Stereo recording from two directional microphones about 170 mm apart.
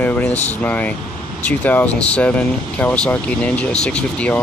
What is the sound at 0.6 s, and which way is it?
Speech, 10° left (ahead or behind).